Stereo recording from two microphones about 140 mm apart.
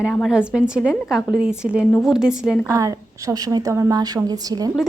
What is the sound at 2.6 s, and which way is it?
A woman's voice, 25° right (ahead or behind).